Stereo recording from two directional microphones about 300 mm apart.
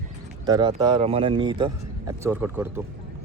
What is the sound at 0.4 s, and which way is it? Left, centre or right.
Speech, centre.